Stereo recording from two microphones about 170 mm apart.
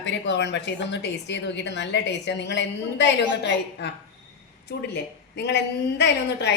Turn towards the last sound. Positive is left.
turn(degrees=90)